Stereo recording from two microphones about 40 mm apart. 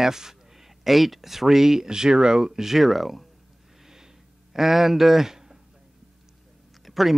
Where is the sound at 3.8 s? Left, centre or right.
Centre.